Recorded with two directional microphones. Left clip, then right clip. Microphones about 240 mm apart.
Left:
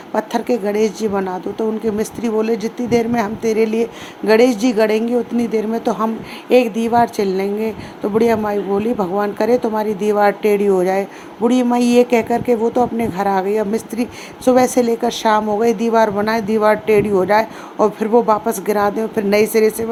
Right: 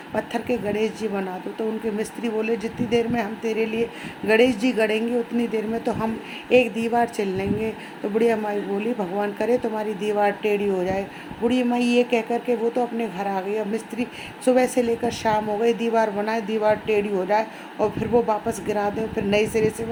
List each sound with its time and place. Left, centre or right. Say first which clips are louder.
0.1 s speech: left 7 dB; centre